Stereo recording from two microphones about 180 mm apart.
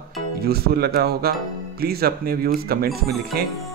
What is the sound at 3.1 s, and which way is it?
Speech, centre (ahead or behind).